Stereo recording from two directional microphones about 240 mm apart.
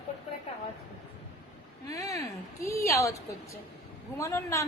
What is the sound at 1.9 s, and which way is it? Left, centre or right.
A woman's voice, centre.